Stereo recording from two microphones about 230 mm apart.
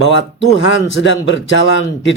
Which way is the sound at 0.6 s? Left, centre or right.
Left.